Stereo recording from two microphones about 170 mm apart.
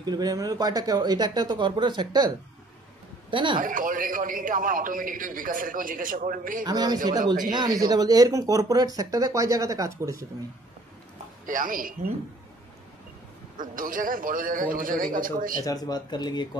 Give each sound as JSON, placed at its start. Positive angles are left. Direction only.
{"t": 0.0, "sound": "a man's voice", "side_deg": -25}
{"t": 3.6, "sound": "a man's voice", "side_deg": -55}
{"t": 6.6, "sound": "speech", "side_deg": -25}
{"t": 11.4, "sound": "a man's voice", "side_deg": -55}
{"t": 13.6, "sound": "a man's voice", "side_deg": -55}
{"t": 15.6, "sound": "speech", "side_deg": 20}